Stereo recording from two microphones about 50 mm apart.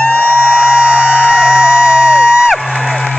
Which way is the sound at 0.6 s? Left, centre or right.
Centre.